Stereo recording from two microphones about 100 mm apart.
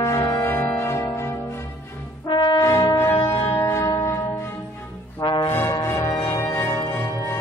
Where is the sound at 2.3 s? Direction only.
55° left (ahead or behind).